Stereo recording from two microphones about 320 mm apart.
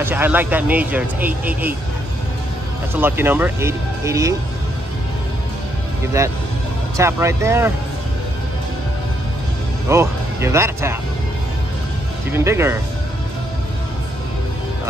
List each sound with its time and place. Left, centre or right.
0.0 s speech: centre
2.9 s speech: centre
7.0 s speech: centre
9.8 s speech: centre
12.3 s speech: centre